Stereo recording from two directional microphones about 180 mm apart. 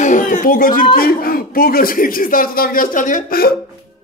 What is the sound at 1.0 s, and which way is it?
A man's voice, 55° left (ahead or behind).